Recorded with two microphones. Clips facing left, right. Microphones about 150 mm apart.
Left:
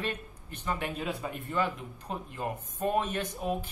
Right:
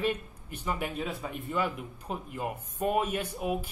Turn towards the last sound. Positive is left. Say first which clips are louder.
# right 1 dB
turn(degrees=-10)  # may be behind; listen again after turning